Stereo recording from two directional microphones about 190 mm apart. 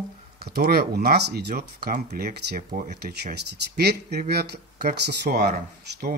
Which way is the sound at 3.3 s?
60° right (ahead or behind).